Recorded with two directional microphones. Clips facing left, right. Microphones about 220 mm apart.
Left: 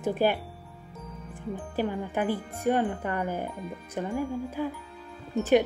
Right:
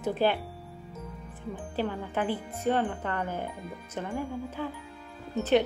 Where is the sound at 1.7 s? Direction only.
15° left (ahead or behind).